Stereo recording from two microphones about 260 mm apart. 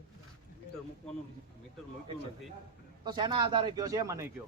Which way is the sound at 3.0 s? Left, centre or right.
Centre.